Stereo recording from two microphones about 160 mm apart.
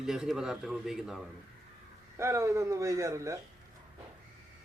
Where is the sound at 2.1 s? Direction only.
15° right (ahead or behind).